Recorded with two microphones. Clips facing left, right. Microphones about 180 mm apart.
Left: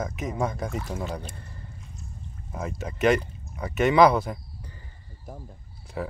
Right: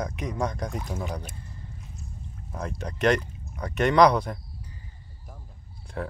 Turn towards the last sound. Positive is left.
turn(degrees=5)  # may be behind; listen again after turning